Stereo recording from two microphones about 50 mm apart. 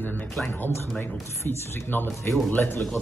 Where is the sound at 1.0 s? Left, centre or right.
Left.